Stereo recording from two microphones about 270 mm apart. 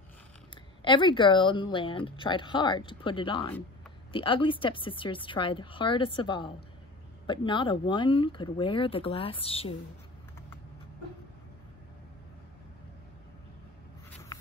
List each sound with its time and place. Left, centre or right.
0.8 s speech: centre